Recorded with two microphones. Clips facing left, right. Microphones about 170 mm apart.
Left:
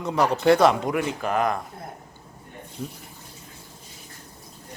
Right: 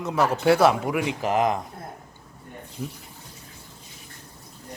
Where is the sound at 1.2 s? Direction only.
25° right (ahead or behind).